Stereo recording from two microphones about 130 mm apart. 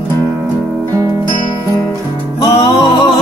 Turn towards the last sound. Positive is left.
turn(degrees=35)  # may be behind; listen again after turning